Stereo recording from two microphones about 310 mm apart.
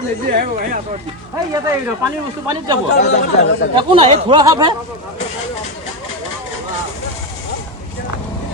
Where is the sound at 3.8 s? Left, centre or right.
Centre.